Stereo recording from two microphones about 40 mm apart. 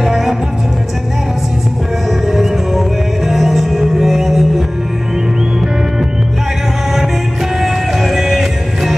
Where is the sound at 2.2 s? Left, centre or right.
Centre.